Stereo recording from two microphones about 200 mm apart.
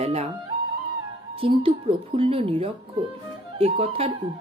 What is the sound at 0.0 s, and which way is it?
Speech, 30° right (ahead or behind).